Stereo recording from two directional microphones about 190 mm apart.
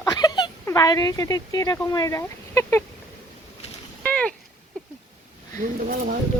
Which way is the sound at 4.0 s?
5° left (ahead or behind).